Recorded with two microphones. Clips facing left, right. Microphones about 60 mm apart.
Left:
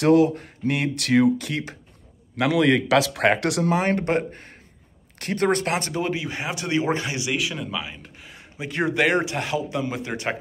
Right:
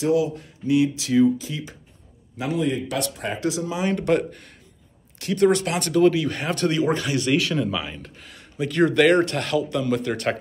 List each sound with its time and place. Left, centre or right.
0.0 s speech: left
0.7 s speech: left
2.3 s speech: left
4.0 s speech: left
5.9 s speech: left
6.7 s speech: left
7.2 s speech: centre
8.3 s speech: left